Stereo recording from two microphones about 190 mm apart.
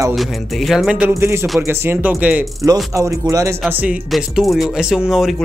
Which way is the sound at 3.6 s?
5° right (ahead or behind).